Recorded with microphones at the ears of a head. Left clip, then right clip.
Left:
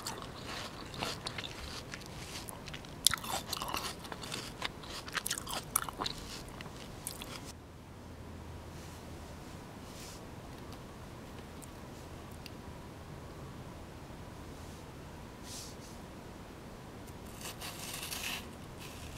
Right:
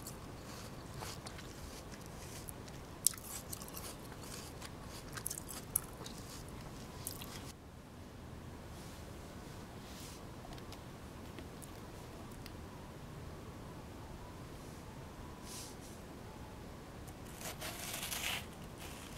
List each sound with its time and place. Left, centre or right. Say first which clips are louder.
0.0 s a sound: left 8 dB; left
3.0 s chewing: left 11 dB; left
17.6 s sawing: left 1 dB; centre